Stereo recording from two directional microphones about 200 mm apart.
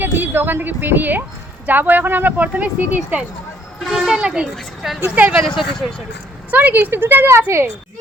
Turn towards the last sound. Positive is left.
turn(degrees=-10)  # may be behind; listen again after turning